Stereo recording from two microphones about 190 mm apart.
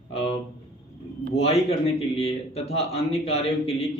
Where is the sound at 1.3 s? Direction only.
30° left (ahead or behind).